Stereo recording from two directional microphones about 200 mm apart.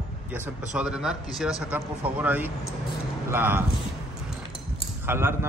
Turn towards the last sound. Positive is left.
turn(degrees=-10)  # may be behind; listen again after turning